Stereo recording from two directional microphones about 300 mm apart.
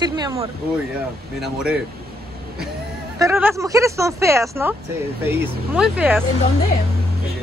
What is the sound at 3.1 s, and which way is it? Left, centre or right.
Speech, centre.